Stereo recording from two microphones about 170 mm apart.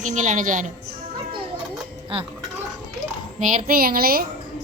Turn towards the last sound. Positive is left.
turn(degrees=-60)  # may be behind; listen again after turning